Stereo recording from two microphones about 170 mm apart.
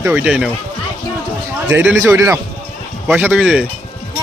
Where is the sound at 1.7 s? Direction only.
10° right (ahead or behind).